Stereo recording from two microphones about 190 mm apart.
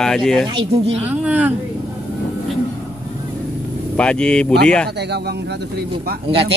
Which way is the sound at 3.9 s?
5° left (ahead or behind).